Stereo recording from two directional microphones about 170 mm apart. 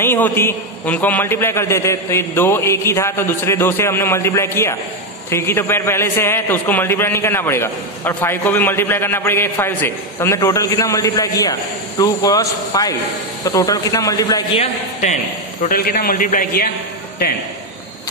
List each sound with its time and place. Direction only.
0.0 s a man's voice: 15° left (ahead or behind)
14.5 s speech: 40° left (ahead or behind)
15.7 s a man's voice: 60° left (ahead or behind)